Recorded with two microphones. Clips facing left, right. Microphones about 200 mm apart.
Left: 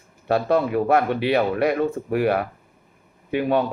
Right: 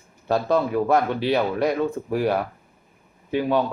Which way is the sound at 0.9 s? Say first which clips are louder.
Left 2 dB; 60° left (ahead or behind).